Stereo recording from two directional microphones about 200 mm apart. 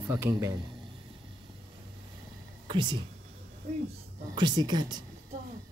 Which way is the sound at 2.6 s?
25° right (ahead or behind).